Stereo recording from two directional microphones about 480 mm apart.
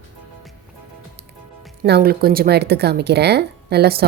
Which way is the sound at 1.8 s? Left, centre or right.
Centre.